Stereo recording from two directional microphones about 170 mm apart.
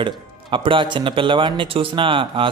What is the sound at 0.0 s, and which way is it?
Speech, 30° right (ahead or behind).